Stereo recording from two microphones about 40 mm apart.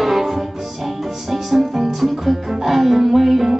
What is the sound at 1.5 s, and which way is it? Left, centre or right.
Music, centre.